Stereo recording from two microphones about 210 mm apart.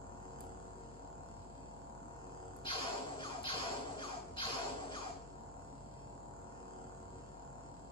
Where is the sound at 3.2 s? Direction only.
25° left (ahead or behind).